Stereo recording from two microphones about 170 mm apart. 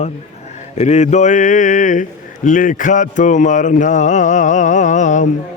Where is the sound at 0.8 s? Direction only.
45° left (ahead or behind).